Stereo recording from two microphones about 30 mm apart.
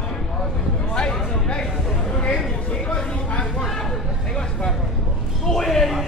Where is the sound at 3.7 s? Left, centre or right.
Centre.